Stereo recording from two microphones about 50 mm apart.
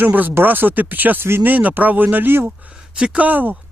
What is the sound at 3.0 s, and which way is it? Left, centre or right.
Speech, right.